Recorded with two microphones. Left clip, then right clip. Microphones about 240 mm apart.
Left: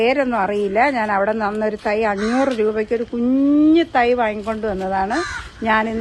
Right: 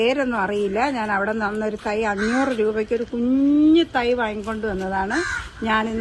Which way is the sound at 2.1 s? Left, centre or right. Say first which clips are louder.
Left 3 dB; centre.